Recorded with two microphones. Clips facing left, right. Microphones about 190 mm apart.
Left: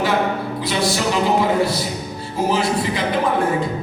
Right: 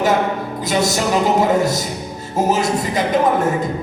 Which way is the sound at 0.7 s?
45° right (ahead or behind).